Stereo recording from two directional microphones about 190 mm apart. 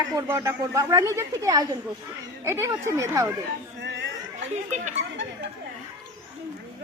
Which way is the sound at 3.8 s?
65° right (ahead or behind).